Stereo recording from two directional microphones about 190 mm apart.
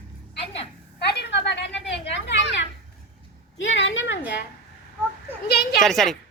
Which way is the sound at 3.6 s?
75° left (ahead or behind).